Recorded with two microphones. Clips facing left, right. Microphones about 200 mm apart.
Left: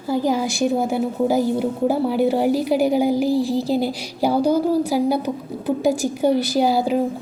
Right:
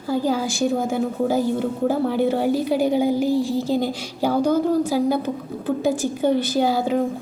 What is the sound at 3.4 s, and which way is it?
Speech, 35° left (ahead or behind).